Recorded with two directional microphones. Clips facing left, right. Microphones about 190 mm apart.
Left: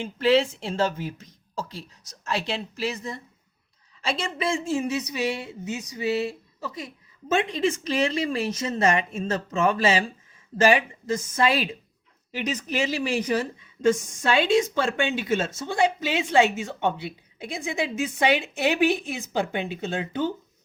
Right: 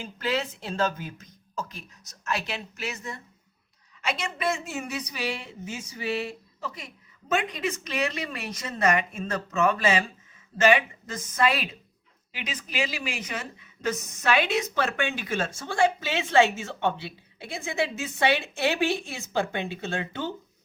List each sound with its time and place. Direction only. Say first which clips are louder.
0.0 s a woman's voice: left 8 dB; 25° left (ahead or behind)
12.3 s a woman's voice: left 8 dB; 40° left (ahead or behind); by 20.2 s 15° left (ahead or behind)